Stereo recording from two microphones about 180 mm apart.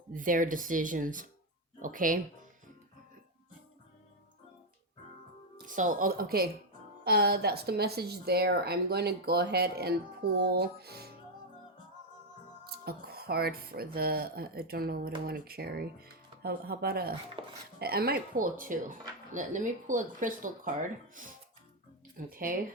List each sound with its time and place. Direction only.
0.1 s speech: 50° right (ahead or behind)
5.6 s speech: 45° right (ahead or behind); by 11.1 s 60° right (ahead or behind)
12.6 s speech: 60° right (ahead or behind)
17.4 s speech: 30° right (ahead or behind)
17.7 s speech: 60° right (ahead or behind)
22.3 s speech: 50° right (ahead or behind)